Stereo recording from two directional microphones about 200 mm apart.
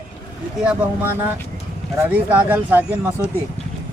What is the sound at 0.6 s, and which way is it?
Speech, 5° right (ahead or behind).